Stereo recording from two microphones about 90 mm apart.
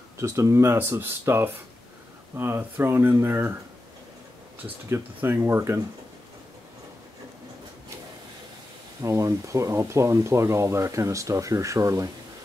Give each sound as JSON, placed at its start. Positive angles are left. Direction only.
{"t": 0.2, "sound": "speech", "side_deg": -30}
{"t": 4.8, "sound": "speech", "side_deg": -25}
{"t": 9.0, "sound": "speech", "side_deg": -35}